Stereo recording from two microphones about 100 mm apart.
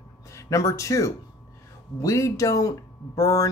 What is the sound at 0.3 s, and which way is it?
Speech, 30° left (ahead or behind).